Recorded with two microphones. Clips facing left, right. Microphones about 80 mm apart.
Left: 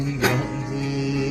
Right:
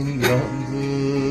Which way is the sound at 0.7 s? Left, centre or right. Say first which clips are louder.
Right 4 dB; right.